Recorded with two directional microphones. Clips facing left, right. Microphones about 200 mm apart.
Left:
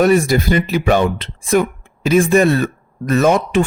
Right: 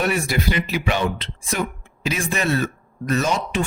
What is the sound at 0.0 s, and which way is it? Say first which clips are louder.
Speech: left 9 dB; 45° left (ahead or behind).